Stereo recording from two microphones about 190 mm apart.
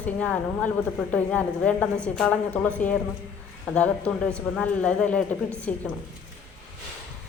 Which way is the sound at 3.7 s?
5° left (ahead or behind).